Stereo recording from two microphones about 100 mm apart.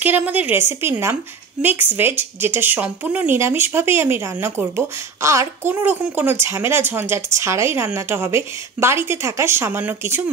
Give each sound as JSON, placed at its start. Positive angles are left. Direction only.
{"t": 0.0, "sound": "speech", "side_deg": -15}